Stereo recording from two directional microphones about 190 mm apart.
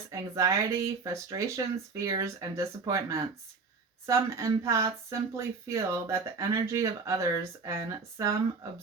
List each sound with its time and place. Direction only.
0.1 s speech: 15° right (ahead or behind)